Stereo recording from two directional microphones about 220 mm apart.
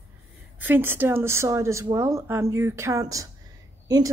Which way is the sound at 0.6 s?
10° right (ahead or behind).